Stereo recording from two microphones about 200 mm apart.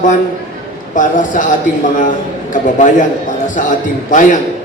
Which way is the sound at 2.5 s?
40° left (ahead or behind).